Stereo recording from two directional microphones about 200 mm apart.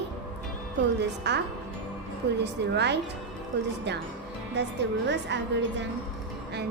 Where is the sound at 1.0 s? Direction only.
60° right (ahead or behind).